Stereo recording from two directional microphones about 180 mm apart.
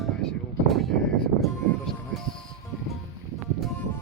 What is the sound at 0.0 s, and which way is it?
Music, centre (ahead or behind).